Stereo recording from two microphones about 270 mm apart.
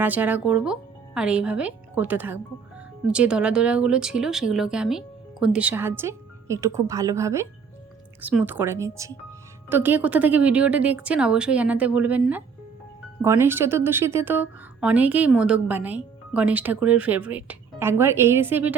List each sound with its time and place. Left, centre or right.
0.0 s speech: centre